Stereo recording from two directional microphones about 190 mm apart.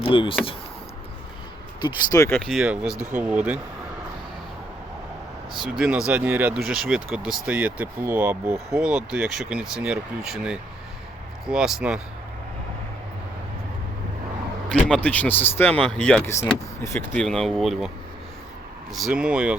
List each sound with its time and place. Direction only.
0.0 s speech: 25° left (ahead or behind)
2.0 s speech: 15° left (ahead or behind)
2.4 s speech: centre (ahead or behind)
5.5 s speech: 5° right (ahead or behind)
14.7 s speech: 5° left (ahead or behind)
17.2 s speech: centre (ahead or behind)
18.9 s speech: centre (ahead or behind)